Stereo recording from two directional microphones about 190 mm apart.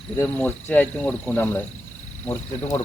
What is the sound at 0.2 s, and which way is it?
Speech, 10° left (ahead or behind).